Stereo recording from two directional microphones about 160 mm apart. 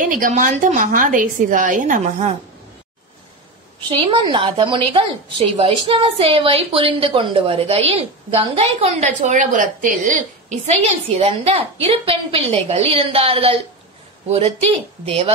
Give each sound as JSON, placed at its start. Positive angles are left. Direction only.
{"t": 0.0, "sound": "a woman's voice", "side_deg": -55}
{"t": 4.0, "sound": "a woman's voice", "side_deg": -30}
{"t": 10.7, "sound": "a woman's voice", "side_deg": -40}